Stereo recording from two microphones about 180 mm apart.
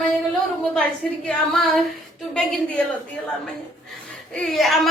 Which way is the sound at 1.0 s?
Centre (ahead or behind).